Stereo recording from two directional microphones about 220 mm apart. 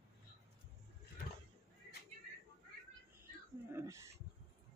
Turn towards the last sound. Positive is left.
turn(degrees=-15)  # may be behind; listen again after turning